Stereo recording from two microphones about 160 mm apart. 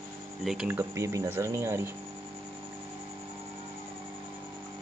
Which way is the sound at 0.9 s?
20° right (ahead or behind).